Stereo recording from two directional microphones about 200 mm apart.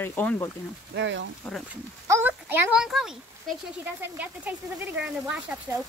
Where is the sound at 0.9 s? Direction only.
65° right (ahead or behind).